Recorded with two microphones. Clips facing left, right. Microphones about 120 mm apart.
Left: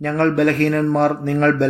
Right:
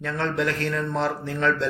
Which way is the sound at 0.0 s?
55° left (ahead or behind).